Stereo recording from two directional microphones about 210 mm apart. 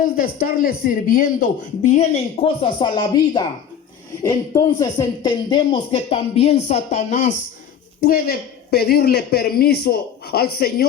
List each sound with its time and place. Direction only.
0.0 s speech: 45° left (ahead or behind)